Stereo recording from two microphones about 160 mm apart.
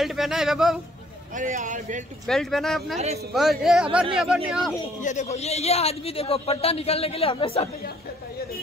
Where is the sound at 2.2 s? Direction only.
Centre (ahead or behind).